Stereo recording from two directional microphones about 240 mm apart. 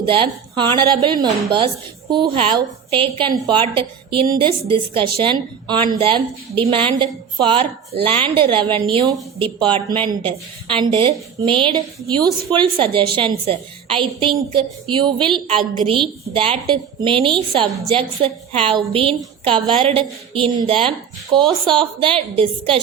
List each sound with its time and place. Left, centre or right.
0.0 s a woman's voice: right